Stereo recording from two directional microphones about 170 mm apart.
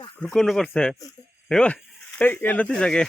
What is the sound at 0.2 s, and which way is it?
Speech, centre (ahead or behind).